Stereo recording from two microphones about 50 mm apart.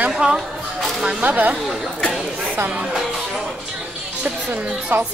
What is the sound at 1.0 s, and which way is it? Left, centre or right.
Speech, right.